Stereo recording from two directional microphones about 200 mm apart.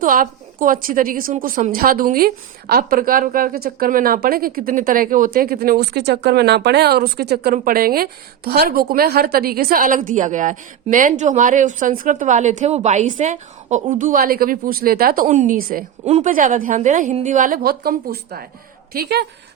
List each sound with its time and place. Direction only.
0.0 s a woman's voice: 45° right (ahead or behind)